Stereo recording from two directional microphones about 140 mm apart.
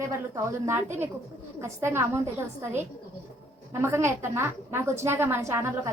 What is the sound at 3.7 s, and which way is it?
A woman's voice, 20° right (ahead or behind).